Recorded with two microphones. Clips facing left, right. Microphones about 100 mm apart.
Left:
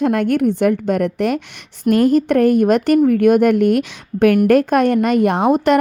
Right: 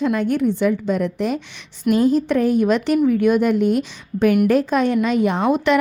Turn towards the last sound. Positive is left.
turn(degrees=45)  # may be behind; listen again after turning